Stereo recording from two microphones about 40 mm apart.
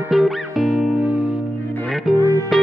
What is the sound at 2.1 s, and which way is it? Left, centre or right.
Music, centre.